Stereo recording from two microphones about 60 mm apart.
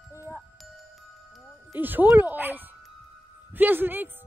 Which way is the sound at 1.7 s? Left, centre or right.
Right.